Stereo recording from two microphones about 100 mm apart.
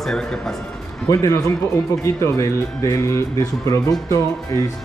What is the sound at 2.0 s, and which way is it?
Speech, 30° left (ahead or behind).